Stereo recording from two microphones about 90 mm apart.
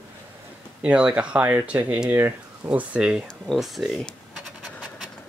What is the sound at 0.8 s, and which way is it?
Speech, 15° right (ahead or behind).